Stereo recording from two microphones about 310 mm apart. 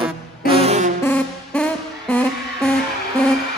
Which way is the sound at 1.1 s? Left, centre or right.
Centre.